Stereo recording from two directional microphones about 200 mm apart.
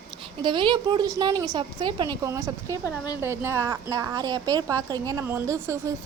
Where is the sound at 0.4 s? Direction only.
25° right (ahead or behind).